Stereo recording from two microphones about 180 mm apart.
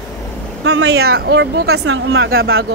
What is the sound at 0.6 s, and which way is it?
Speech, 70° right (ahead or behind).